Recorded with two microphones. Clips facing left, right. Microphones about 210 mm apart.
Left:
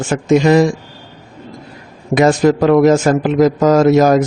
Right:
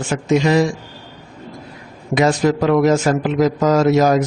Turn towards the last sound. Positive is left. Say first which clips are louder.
# left 4 dB
turn(degrees=50)  # may be behind; listen again after turning